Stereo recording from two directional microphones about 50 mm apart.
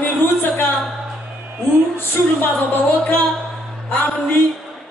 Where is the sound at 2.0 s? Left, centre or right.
Left.